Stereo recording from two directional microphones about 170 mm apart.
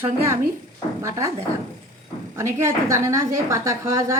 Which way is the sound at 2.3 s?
15° right (ahead or behind).